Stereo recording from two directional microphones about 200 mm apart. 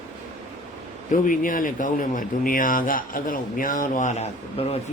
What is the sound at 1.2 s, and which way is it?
Speech, 40° left (ahead or behind).